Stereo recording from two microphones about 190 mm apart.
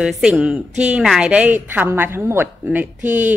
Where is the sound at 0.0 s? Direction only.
5° right (ahead or behind).